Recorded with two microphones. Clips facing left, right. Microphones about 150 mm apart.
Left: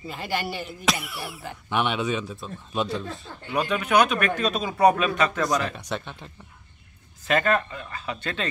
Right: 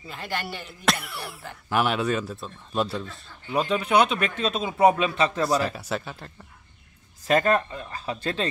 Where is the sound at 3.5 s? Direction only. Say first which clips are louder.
Even; 30° right (ahead or behind).